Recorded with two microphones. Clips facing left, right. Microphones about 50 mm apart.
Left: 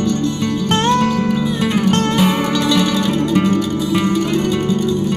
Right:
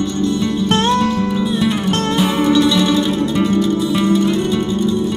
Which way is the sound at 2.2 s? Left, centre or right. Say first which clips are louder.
Right 2 dB; left.